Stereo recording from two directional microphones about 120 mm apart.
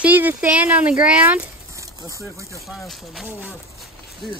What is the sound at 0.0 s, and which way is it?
Speech, 15° right (ahead or behind).